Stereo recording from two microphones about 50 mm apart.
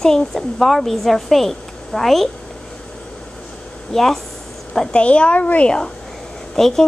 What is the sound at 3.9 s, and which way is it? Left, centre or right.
Speech, centre.